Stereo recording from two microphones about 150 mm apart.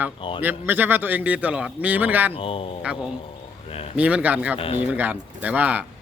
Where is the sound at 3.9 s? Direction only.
10° right (ahead or behind).